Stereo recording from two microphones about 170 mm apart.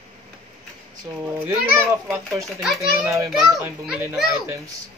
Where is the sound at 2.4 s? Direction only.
Centre (ahead or behind).